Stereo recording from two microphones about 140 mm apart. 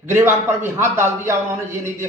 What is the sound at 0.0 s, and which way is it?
A man's voice, 20° right (ahead or behind).